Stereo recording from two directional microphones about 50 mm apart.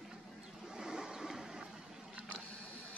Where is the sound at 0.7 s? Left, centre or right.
Centre.